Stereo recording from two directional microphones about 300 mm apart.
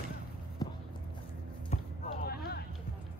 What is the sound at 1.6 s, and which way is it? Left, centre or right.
Basketball bounce, left.